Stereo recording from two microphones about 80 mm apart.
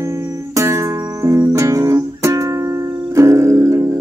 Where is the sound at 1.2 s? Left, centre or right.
Right.